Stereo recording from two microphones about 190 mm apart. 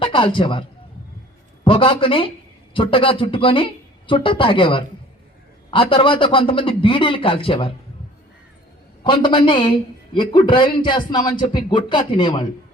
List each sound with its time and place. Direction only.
0.0 s a man's voice: 25° left (ahead or behind)
1.6 s a man's voice: 30° left (ahead or behind)
9.0 s a man's voice: 25° left (ahead or behind)